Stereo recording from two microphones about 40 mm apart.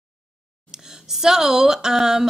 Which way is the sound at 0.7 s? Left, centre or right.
Centre.